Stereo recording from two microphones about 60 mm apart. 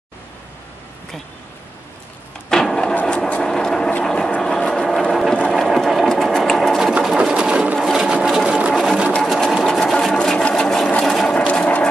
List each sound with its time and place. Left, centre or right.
2.5 s printer: centre
3.3 s vehicle: centre
5.6 s sewing machine: centre
6.8 s sewing machine: centre
7.8 s sewing machine: centre
10.1 s sewing machine: centre
11.1 s a sound: centre
11.3 s a sound: left